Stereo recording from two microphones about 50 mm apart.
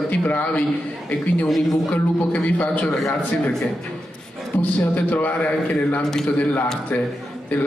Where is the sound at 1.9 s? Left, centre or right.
Left.